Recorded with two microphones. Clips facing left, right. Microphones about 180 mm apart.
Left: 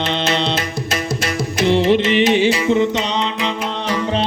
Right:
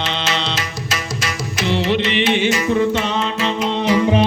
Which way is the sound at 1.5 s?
50° left (ahead or behind).